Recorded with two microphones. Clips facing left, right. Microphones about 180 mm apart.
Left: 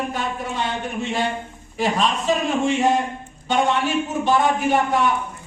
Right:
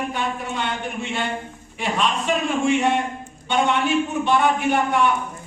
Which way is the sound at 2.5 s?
40° left (ahead or behind).